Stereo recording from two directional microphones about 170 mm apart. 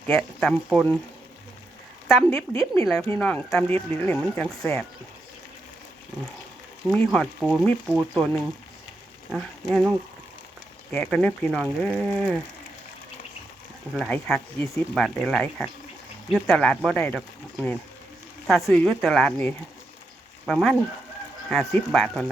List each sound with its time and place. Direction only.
0.1 s speech: 5° left (ahead or behind)
2.0 s speech: centre (ahead or behind)
2.5 s speech: 20° left (ahead or behind)
6.9 s speech: centre (ahead or behind)
10.9 s speech: 5° left (ahead or behind)
13.9 s speech: centre (ahead or behind)
18.7 s speech: 10° left (ahead or behind)
21.9 s speech: centre (ahead or behind)